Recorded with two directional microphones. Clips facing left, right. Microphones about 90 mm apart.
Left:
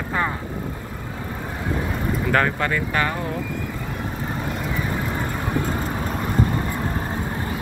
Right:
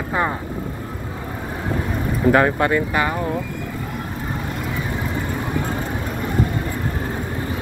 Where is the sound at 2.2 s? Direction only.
20° right (ahead or behind).